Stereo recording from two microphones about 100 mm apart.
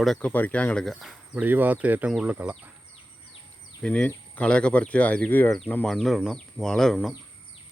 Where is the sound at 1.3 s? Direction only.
15° right (ahead or behind).